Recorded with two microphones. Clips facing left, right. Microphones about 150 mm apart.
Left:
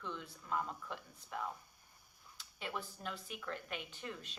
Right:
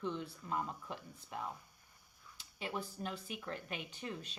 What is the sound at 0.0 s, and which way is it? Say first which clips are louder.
Speech: right 6 dB; 25° right (ahead or behind).